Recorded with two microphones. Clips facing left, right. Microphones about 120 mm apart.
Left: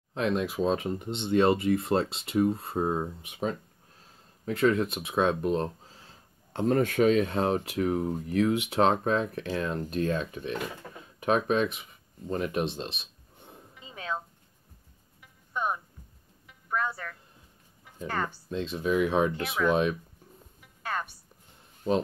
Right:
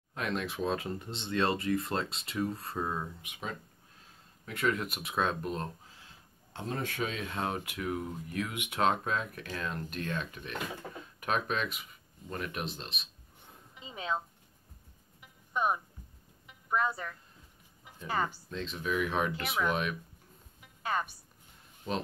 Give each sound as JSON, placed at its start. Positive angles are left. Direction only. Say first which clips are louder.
{"t": 0.1, "sound": "speech", "louder": "left 7 dB", "side_deg": 25}
{"t": 6.5, "sound": "speech", "louder": "left 12 dB", "side_deg": 50}
{"t": 7.2, "sound": "speech", "louder": "left 9 dB", "side_deg": 30}
{"t": 15.5, "sound": "music", "louder": "even", "side_deg": -10}
{"t": 18.0, "sound": "speech", "louder": "left 1 dB", "side_deg": -10}
{"t": 18.8, "sound": "speech", "louder": "left 6 dB", "side_deg": 35}
{"t": 19.0, "sound": "speech", "louder": "left 6 dB", "side_deg": 20}
{"t": 20.6, "sound": "music", "louder": "even", "side_deg": -5}